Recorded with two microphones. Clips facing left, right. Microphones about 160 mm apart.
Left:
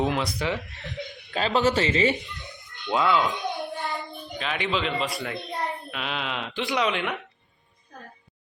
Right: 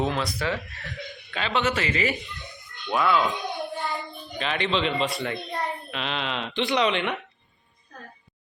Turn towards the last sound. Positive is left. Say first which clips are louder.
# right 2 dB
turn(degrees=5)  # may be behind; listen again after turning